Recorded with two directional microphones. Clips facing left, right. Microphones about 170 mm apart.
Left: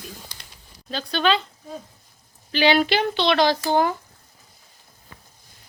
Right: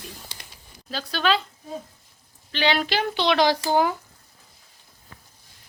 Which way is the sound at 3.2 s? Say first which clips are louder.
Right 1 dB; 15° right (ahead or behind).